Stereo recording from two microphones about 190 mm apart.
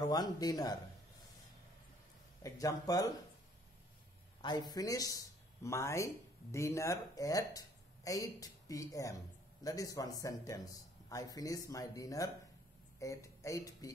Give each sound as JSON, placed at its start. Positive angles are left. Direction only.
{"t": 0.0, "sound": "speech", "side_deg": 20}
{"t": 2.4, "sound": "speech", "side_deg": 20}
{"t": 4.4, "sound": "speech", "side_deg": 20}